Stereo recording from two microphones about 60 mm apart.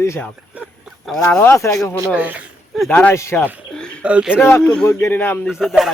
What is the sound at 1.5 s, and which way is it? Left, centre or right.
Speech, left.